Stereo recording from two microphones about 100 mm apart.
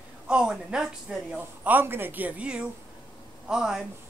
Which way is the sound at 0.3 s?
10° right (ahead or behind).